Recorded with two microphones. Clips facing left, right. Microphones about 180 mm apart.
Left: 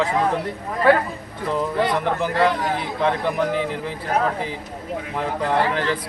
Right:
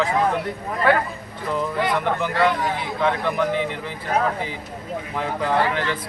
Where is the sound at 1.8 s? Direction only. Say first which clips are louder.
Left 1 dB; 35° left (ahead or behind).